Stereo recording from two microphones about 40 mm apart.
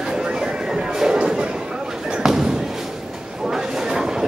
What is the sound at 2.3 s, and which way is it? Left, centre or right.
Thump, centre.